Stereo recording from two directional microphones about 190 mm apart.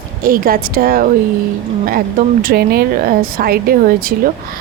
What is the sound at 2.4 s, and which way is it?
Speech, 55° right (ahead or behind).